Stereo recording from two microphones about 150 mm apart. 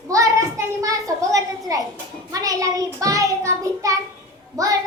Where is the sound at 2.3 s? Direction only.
25° right (ahead or behind).